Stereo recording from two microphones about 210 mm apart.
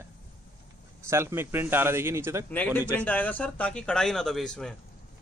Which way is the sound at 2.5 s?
10° left (ahead or behind).